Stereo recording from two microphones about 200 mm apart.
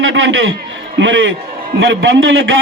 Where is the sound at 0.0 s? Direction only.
75° right (ahead or behind).